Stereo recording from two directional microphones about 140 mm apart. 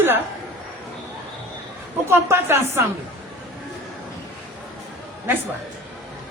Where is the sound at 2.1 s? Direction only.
15° right (ahead or behind).